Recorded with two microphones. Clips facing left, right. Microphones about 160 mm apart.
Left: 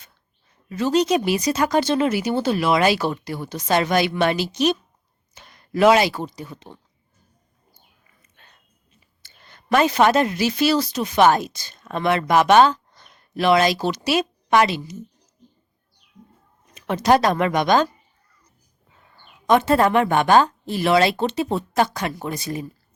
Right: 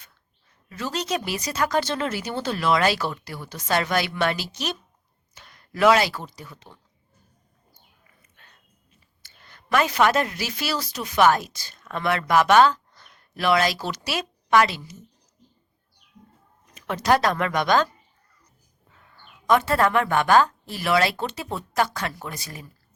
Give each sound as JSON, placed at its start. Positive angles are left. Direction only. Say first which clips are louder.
{"t": 0.7, "sound": "speech", "louder": "left 9 dB", "side_deg": 20}
{"t": 8.4, "sound": "a sound", "louder": "left 2 dB", "side_deg": 25}
{"t": 9.2, "sound": "a woman's voice", "louder": "left 3 dB", "side_deg": 25}
{"t": 16.7, "sound": "speech", "louder": "left 4 dB", "side_deg": 20}
{"t": 19.5, "sound": "speech", "louder": "left 4 dB", "side_deg": 20}